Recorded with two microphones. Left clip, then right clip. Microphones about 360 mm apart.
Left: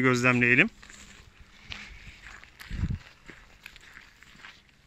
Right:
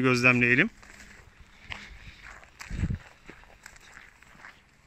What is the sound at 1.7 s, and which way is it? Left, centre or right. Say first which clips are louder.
Walk: right 1 dB; right.